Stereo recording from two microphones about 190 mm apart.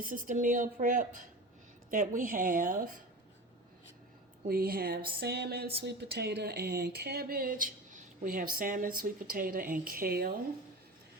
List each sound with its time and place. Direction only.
0.0 s speech: 45° right (ahead or behind)
4.4 s speech: 50° right (ahead or behind)